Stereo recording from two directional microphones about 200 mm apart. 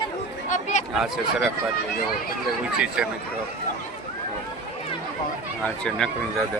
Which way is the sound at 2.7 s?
5° right (ahead or behind).